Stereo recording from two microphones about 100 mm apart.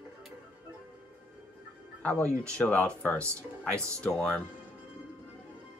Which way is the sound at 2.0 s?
15° left (ahead or behind).